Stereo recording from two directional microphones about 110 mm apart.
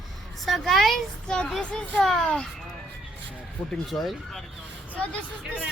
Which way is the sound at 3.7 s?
Centre (ahead or behind).